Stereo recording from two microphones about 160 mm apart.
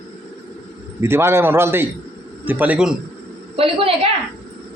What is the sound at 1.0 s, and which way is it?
A man's voice, 15° right (ahead or behind).